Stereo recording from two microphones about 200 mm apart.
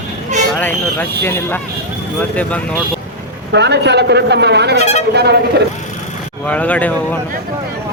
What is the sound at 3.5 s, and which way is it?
A man's voice, 60° right (ahead or behind).